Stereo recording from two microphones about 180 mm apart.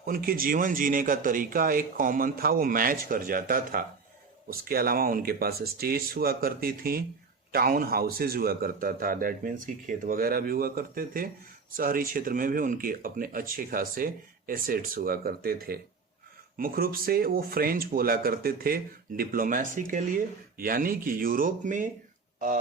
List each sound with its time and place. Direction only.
0.0 s speech: 55° right (ahead or behind)